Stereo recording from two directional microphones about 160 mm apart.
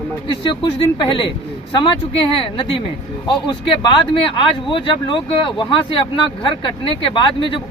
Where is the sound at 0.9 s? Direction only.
30° left (ahead or behind).